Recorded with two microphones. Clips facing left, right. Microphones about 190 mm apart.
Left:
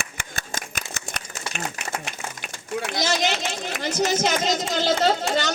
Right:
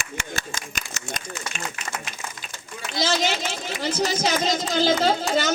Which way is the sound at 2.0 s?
70° left (ahead or behind).